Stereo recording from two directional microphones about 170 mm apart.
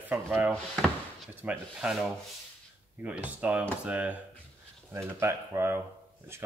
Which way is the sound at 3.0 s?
10° right (ahead or behind).